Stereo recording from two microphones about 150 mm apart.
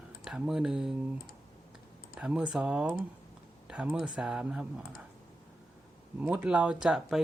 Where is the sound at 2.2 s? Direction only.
5° right (ahead or behind).